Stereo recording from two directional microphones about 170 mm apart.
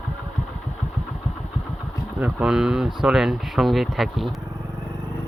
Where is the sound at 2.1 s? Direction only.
5° right (ahead or behind).